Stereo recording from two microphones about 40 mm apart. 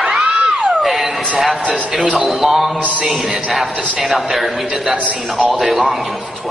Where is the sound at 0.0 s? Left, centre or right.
Centre.